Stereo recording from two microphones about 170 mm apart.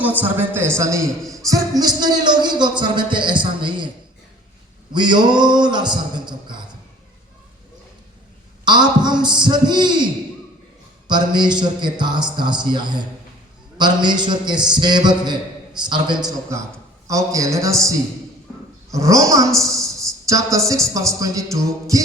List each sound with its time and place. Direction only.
0.0 s a man's voice: 10° right (ahead or behind)
1.2 s speech: centre (ahead or behind)
1.5 s a man's voice: 20° right (ahead or behind)
8.6 s a man's voice: 25° right (ahead or behind)
11.1 s a man's voice: 25° right (ahead or behind)
19.7 s a sound: 20° right (ahead or behind)
20.9 s a man's voice: 20° right (ahead or behind)